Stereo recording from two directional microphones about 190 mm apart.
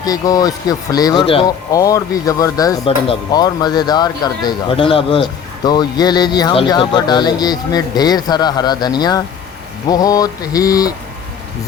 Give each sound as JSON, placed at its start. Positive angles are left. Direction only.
{"t": 0.0, "sound": "speech", "side_deg": 20}
{"t": 1.7, "sound": "speech", "side_deg": 20}